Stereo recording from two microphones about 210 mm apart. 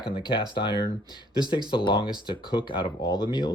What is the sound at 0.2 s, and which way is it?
Speech, 20° left (ahead or behind).